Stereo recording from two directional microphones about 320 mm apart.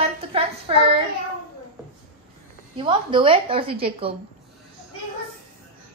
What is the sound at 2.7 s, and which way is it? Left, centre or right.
A woman's voice, centre.